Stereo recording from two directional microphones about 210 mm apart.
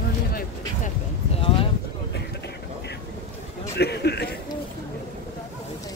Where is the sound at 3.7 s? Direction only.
50° left (ahead or behind).